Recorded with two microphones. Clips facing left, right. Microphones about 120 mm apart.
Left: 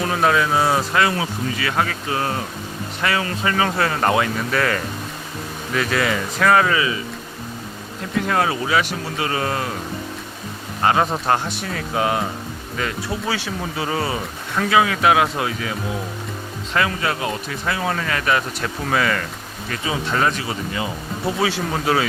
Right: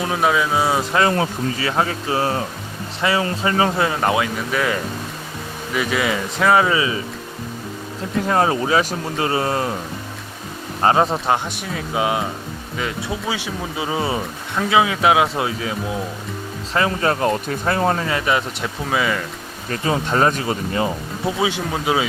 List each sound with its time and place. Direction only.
0.0 s speech: 5° right (ahead or behind)
0.9 s speech: 40° right (ahead or behind)
4.0 s speech: 5° right (ahead or behind); by 6.9 s 20° right (ahead or behind)
8.3 s speech: 35° right (ahead or behind)
10.8 s speech: 30° right (ahead or behind)
11.1 s speech: 15° right (ahead or behind)
16.7 s speech: 35° right (ahead or behind)
17.9 s speech: 25° right (ahead or behind)
19.7 s speech: 45° right (ahead or behind)
21.4 s speech: 15° right (ahead or behind)